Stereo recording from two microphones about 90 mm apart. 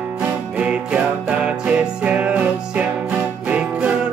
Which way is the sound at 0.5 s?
10° right (ahead or behind).